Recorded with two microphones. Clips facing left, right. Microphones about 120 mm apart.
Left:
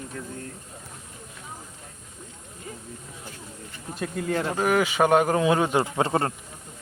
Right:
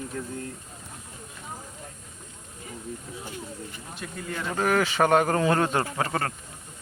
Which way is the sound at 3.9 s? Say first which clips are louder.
Left 8 dB; 50° left (ahead or behind).